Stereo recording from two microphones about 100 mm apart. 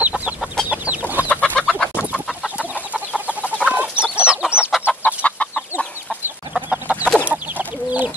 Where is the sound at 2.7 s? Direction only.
15° right (ahead or behind).